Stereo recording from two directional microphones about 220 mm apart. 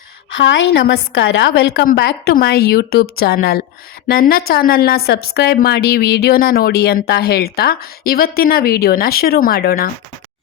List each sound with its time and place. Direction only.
0.3 s a woman's voice: 60° left (ahead or behind); by 9.9 s 45° left (ahead or behind)